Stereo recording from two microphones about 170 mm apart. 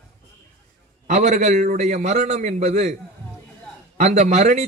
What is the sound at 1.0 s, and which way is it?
A man's voice, 45° right (ahead or behind).